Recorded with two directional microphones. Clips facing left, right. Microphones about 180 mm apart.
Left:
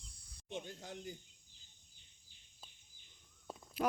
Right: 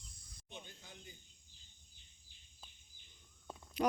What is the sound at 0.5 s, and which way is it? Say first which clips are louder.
Speech: left 9 dB; 70° left (ahead or behind).